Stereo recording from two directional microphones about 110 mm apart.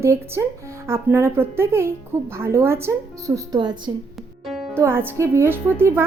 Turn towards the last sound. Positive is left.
turn(degrees=-20)  # may be behind; listen again after turning